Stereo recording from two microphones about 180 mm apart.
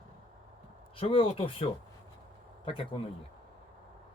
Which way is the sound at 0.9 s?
30° left (ahead or behind).